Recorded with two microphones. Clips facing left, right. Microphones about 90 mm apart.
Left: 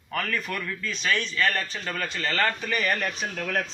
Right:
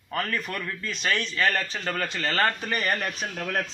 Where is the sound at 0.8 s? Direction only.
45° right (ahead or behind).